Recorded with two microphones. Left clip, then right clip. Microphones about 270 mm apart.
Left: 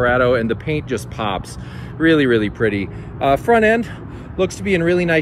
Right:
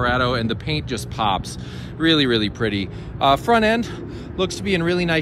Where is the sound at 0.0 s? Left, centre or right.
Centre.